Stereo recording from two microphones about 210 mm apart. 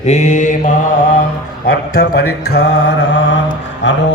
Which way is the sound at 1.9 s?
50° left (ahead or behind).